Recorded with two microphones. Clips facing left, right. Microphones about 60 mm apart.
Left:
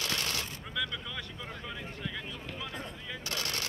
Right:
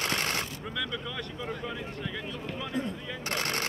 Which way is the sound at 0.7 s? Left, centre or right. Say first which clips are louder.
Even; centre.